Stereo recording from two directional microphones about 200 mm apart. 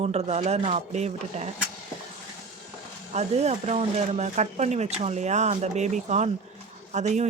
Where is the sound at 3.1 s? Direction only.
35° right (ahead or behind).